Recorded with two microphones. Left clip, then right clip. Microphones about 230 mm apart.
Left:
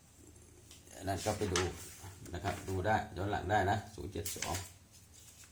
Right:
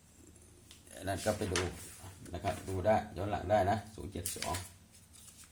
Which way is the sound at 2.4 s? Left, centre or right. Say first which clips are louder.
Right 2 dB; right.